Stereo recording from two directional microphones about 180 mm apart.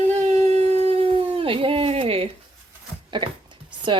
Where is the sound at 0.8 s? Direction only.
30° right (ahead or behind).